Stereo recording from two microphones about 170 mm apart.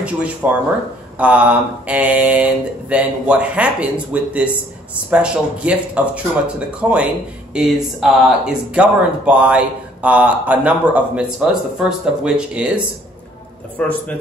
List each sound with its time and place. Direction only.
0.0 s speech: 10° right (ahead or behind)
13.7 s a man's voice: 10° left (ahead or behind)